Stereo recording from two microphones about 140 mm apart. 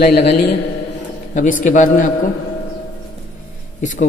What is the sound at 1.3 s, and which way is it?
Speech, 65° left (ahead or behind).